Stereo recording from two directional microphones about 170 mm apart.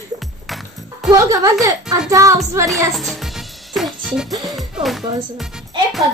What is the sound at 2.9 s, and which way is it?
Music, centre (ahead or behind).